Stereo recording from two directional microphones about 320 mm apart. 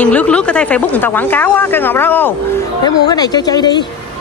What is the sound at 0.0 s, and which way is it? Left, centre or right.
Speech, centre.